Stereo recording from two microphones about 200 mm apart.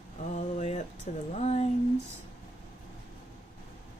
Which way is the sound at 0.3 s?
35° left (ahead or behind).